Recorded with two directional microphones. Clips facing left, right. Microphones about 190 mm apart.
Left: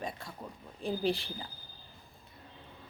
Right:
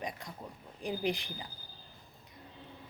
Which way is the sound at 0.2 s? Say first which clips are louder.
Even; 15° right (ahead or behind).